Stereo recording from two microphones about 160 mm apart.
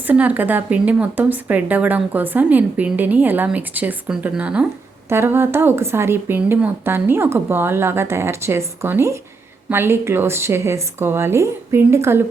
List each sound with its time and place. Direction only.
0.1 s speech: 10° right (ahead or behind)